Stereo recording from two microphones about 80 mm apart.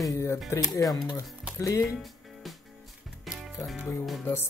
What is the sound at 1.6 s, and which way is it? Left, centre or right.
Speech, left.